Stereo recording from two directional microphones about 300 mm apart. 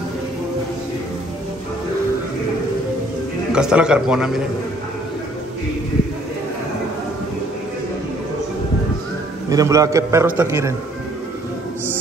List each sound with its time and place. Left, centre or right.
3.5 s a man's voice: centre
9.5 s a man's voice: centre